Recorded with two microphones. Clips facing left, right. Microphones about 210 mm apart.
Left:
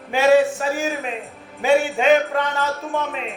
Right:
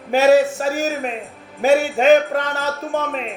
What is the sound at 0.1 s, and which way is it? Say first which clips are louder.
Music: right 2 dB; 40° right (ahead or behind).